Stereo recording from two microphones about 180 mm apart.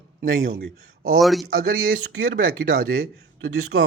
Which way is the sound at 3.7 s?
90° right.